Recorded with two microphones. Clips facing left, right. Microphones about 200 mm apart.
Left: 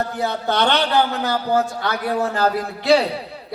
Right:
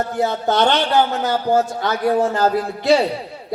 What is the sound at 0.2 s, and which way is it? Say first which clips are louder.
A man's voice: right 4 dB; 45° right (ahead or behind).